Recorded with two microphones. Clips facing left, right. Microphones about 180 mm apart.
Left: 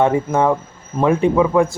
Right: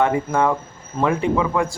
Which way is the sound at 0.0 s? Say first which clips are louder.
Left 3 dB; 20° left (ahead or behind).